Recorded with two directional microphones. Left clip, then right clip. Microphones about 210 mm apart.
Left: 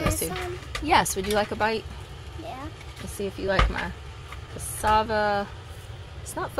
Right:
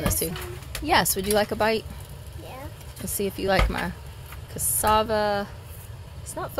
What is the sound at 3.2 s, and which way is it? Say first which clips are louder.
A woman's voice: right 2 dB; 25° right (ahead or behind).